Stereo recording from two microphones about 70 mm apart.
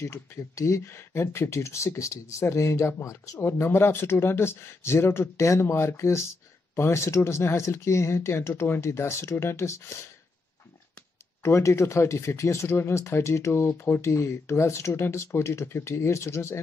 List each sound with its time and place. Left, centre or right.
0.0 s speech: left
11.4 s speech: left
14.0 s speech: left